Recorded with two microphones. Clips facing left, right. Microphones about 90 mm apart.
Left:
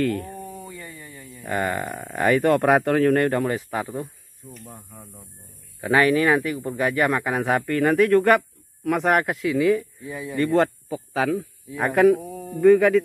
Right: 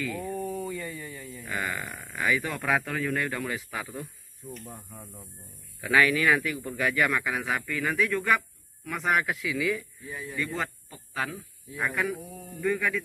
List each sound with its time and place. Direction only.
0.4 s a sound: 30° left (ahead or behind)
1.5 s a man's voice: 45° left (ahead or behind); by 3.3 s 65° left (ahead or behind)
3.3 s speech: 45° left (ahead or behind)
4.4 s speech: 15° right (ahead or behind)
5.8 s a man's voice: 35° left (ahead or behind)
10.3 s speech: 60° left (ahead or behind); by 11.2 s 80° left
11.7 s a man's voice: 70° left (ahead or behind)